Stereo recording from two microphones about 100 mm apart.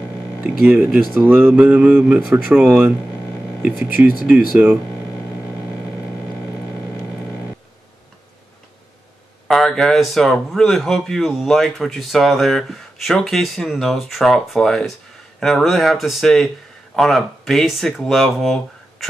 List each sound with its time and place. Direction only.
0.4 s speech: 10° right (ahead or behind)
4.3 s speech: 15° right (ahead or behind)
9.5 s speech: 5° left (ahead or behind)